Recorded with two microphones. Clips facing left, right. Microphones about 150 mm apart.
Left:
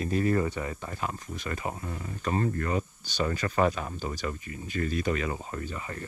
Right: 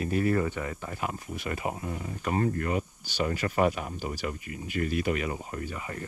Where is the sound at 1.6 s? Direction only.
75° right (ahead or behind).